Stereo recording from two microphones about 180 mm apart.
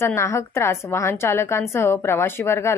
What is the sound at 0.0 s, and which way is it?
A woman's voice, 15° left (ahead or behind).